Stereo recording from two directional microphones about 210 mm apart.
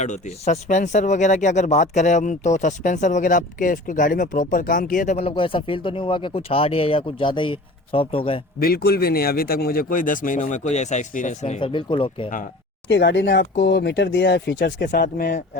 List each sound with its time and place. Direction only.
0.0 s a man's voice: 35° left (ahead or behind)
8.5 s speech: 45° left (ahead or behind); by 12.3 s 25° left (ahead or behind)
12.9 s speech: 60° left (ahead or behind)
14.8 s speech: 40° left (ahead or behind)